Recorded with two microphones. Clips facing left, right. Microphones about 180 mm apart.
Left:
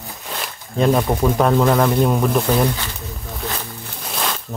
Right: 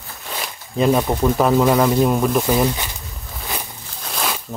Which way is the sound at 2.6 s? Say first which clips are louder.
Even; 20° right (ahead or behind).